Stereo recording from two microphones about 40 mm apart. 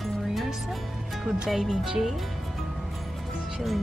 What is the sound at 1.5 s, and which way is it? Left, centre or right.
Speech, centre.